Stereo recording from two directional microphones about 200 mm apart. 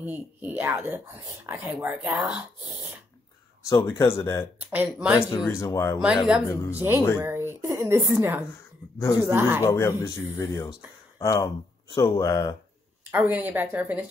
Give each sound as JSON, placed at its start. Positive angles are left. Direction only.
{"t": 0.0, "sound": "speech", "side_deg": -10}
{"t": 3.7, "sound": "speech", "side_deg": 15}
{"t": 4.7, "sound": "speech", "side_deg": -5}
{"t": 5.5, "sound": "speech", "side_deg": 15}
{"t": 6.0, "sound": "speech", "side_deg": -5}
{"t": 8.9, "sound": "speech", "side_deg": 15}
{"t": 9.2, "sound": "speech", "side_deg": -10}
{"t": 9.6, "sound": "speech", "side_deg": 15}
{"t": 13.1, "sound": "speech", "side_deg": -10}